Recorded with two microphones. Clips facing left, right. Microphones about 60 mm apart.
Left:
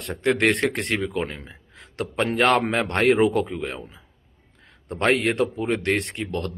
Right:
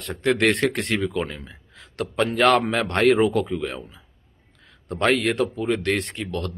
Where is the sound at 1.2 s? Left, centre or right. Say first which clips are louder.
Even; left.